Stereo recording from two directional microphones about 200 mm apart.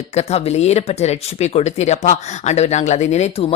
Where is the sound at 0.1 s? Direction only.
35° left (ahead or behind).